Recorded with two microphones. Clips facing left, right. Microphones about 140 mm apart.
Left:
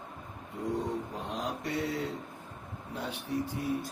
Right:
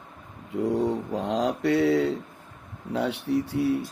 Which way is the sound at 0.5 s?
75° right (ahead or behind).